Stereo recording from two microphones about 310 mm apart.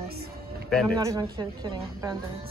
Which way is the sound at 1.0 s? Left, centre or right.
Centre.